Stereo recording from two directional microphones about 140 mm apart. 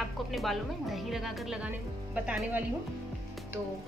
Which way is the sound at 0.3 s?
Centre (ahead or behind).